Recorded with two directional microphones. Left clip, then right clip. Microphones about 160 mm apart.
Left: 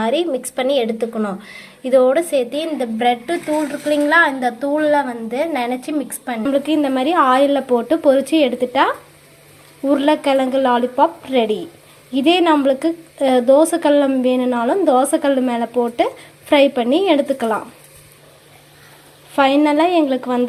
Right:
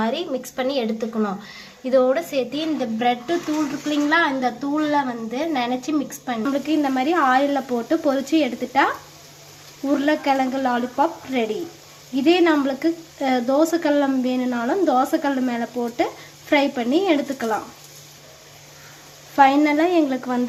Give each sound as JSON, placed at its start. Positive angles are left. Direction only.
{"t": 0.0, "sound": "a woman's voice", "side_deg": 20}
{"t": 9.9, "sound": "a woman's voice", "side_deg": 25}
{"t": 19.4, "sound": "a woman's voice", "side_deg": 20}